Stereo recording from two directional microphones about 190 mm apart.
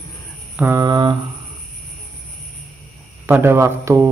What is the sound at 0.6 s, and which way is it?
Mantra, 15° right (ahead or behind).